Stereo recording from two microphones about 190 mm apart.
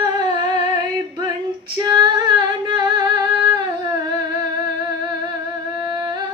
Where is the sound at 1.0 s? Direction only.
20° right (ahead or behind).